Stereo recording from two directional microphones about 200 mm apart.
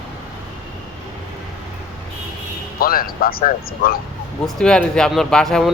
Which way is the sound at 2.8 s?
45° left (ahead or behind).